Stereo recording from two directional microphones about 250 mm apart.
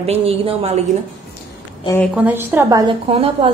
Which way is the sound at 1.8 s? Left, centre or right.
Centre.